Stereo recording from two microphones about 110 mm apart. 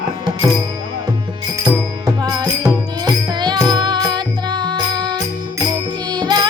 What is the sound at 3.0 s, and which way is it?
Music, 40° right (ahead or behind).